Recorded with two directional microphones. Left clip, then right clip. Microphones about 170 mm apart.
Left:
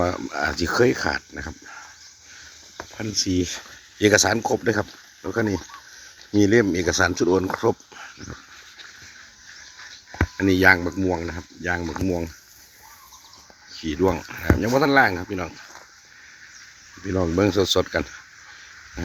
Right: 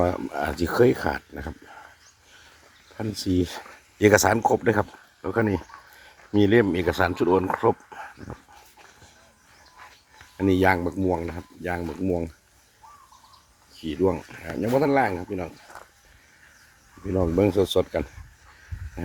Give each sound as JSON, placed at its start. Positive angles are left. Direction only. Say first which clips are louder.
{"t": 0.0, "sound": "speech", "louder": "left 1 dB", "side_deg": -20}
{"t": 3.0, "sound": "speech", "louder": "left 2 dB", "side_deg": -20}
{"t": 10.3, "sound": "speech", "louder": "left 4 dB", "side_deg": -5}
{"t": 13.7, "sound": "speech", "louder": "left 2 dB", "side_deg": 5}
{"t": 17.2, "sound": "speech", "louder": "left 1 dB", "side_deg": -10}